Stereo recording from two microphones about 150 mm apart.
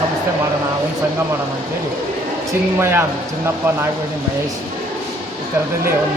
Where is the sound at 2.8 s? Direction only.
15° right (ahead or behind).